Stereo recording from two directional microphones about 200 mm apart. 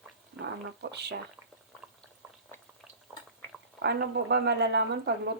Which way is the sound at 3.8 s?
55° right (ahead or behind).